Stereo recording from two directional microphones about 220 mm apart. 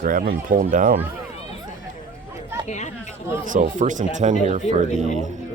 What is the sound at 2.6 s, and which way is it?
Chatter, 30° left (ahead or behind).